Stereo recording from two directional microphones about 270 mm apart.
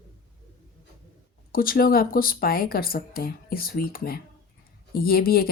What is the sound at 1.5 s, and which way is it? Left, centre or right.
Speech, left.